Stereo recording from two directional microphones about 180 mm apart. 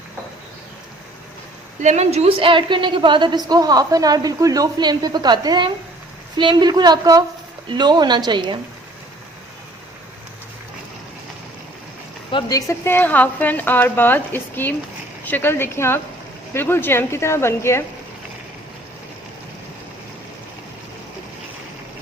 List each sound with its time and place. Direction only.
1.8 s a woman's voice: 40° right (ahead or behind)
12.3 s a woman's voice: 25° left (ahead or behind)